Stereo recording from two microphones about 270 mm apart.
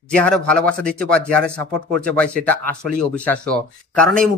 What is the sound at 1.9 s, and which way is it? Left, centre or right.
Speech, centre.